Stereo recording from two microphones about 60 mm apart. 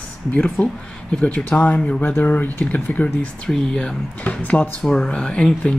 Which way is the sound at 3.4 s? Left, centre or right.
Centre.